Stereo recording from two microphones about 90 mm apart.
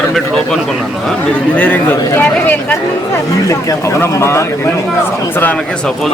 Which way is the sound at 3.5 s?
35° left (ahead or behind).